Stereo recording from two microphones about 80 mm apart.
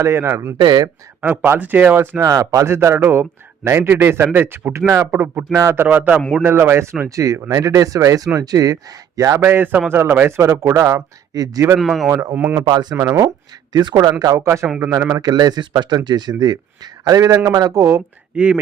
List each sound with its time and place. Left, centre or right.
0.0 s a man's voice: right
0.6 s speech: right
1.2 s speech: right
2.2 s a man's voice: right
11.8 s speech: centre
12.3 s speech: right
12.6 s speech: right
13.0 s a man's voice: right
13.7 s speech: right
14.2 s a man's voice: right
15.1 s a man's voice: right
18.3 s speech: centre